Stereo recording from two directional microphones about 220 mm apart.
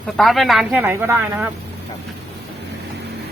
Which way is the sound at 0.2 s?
Centre (ahead or behind).